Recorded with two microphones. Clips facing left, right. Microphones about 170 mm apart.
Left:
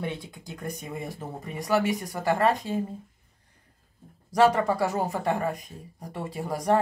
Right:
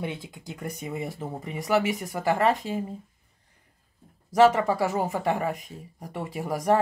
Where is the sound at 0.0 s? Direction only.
15° right (ahead or behind).